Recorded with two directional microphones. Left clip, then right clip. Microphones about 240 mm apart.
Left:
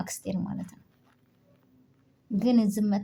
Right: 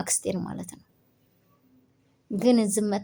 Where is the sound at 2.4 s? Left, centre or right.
Right.